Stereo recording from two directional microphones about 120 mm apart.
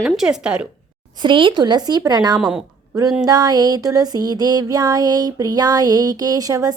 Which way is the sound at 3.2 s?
30° right (ahead or behind).